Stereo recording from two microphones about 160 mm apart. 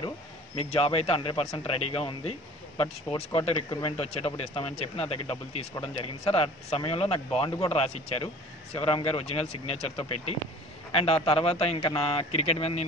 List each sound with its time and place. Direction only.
0.6 s speech: 40° left (ahead or behind)